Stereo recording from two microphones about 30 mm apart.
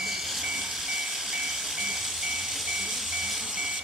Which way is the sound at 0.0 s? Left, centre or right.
Centre.